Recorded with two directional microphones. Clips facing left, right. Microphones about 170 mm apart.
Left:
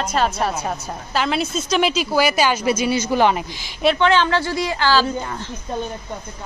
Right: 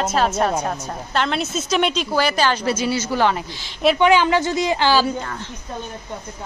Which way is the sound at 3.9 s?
15° right (ahead or behind).